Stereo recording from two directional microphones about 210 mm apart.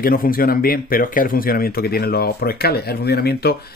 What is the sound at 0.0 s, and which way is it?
Speech, 45° left (ahead or behind).